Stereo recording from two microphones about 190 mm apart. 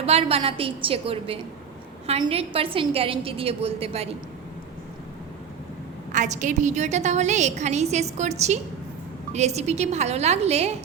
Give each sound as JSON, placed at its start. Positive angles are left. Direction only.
{"t": 0.0, "sound": "a woman's voice", "side_deg": -30}
{"t": 6.1, "sound": "a woman's voice", "side_deg": -40}